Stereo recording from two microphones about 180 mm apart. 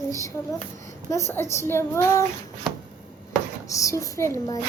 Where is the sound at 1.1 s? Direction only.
15° left (ahead or behind).